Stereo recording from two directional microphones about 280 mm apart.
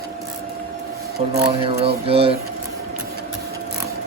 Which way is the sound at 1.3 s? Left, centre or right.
Centre.